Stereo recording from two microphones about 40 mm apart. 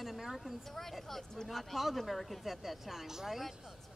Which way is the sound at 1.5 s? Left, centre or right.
Centre.